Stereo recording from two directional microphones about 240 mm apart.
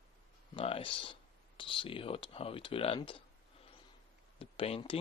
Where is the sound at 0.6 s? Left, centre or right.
Left.